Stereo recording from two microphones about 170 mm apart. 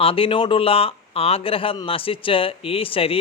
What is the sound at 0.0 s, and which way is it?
Speech, 35° left (ahead or behind).